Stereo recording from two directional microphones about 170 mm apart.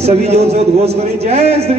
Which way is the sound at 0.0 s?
40° right (ahead or behind).